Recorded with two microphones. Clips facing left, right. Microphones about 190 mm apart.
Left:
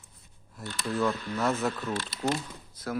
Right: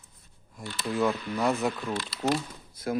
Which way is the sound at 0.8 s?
15° right (ahead or behind).